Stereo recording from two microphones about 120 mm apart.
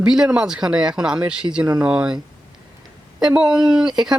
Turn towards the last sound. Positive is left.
turn(degrees=-5)  # may be behind; listen again after turning